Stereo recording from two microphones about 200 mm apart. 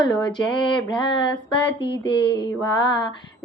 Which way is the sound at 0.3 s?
25° left (ahead or behind).